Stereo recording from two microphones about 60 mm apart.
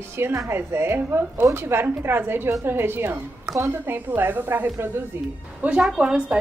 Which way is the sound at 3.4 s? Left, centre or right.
Right.